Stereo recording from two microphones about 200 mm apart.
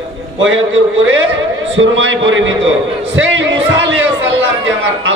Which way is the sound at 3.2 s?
65° right (ahead or behind).